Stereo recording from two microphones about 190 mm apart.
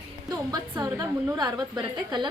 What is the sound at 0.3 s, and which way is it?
A woman's voice, 20° right (ahead or behind).